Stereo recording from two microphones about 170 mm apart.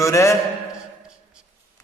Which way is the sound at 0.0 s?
15° left (ahead or behind).